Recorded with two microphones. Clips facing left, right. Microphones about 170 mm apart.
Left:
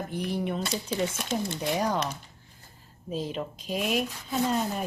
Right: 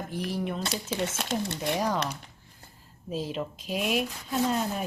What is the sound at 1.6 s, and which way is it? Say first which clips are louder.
Speech: left 1 dB; centre (ahead or behind).